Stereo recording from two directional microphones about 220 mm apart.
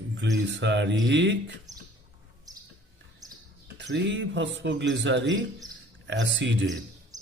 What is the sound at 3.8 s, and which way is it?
Speech, 50° right (ahead or behind).